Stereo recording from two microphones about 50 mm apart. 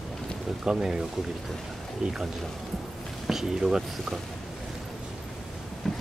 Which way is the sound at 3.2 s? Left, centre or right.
Centre.